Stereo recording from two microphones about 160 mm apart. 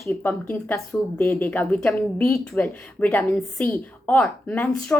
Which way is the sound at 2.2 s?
20° left (ahead or behind).